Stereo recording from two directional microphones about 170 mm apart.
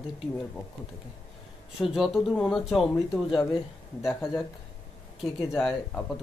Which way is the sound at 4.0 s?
Centre (ahead or behind).